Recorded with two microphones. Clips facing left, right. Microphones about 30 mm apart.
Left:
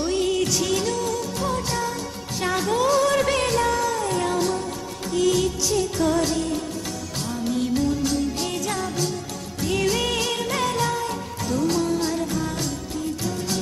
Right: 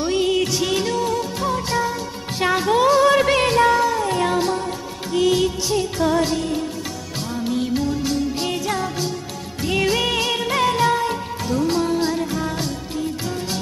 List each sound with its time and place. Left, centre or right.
0.0 s music: right